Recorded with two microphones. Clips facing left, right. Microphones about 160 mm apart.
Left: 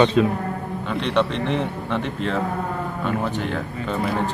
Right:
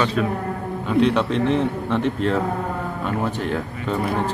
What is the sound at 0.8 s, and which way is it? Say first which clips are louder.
A man's voice: right 4 dB; 5° right (ahead or behind).